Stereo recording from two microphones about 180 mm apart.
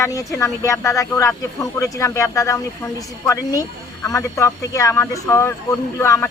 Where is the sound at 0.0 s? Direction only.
15° left (ahead or behind).